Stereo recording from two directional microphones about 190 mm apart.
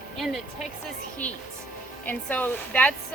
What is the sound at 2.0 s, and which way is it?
Speech, 10° left (ahead or behind).